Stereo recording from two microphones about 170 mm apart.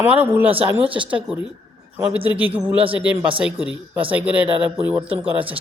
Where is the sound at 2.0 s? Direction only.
10° right (ahead or behind).